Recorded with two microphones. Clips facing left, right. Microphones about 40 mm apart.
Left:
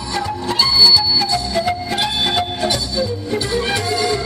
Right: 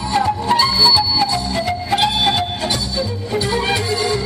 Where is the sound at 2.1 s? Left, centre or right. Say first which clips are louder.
Right 1 dB; centre.